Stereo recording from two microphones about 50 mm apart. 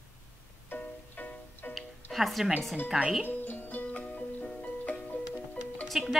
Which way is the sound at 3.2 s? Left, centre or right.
Left.